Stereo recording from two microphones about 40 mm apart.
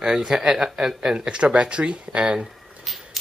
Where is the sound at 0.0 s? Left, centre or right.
Centre.